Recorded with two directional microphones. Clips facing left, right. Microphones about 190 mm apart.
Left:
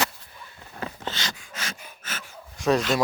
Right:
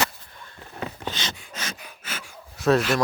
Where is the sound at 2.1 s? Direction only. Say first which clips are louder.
Right 1 dB; 5° right (ahead or behind).